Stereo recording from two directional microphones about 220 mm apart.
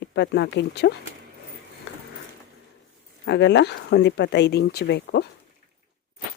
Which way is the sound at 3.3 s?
50° left (ahead or behind).